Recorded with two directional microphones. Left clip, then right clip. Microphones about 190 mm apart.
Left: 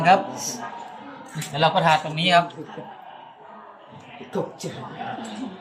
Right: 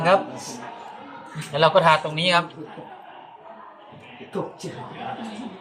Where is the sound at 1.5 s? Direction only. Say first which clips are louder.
Right 2 dB; 50° right (ahead or behind).